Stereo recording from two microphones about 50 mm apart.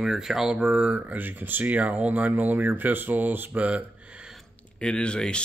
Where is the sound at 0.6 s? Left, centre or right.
Right.